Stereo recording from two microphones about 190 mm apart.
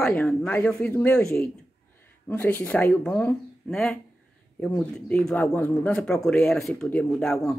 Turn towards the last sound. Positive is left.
turn(degrees=5)  # may be behind; listen again after turning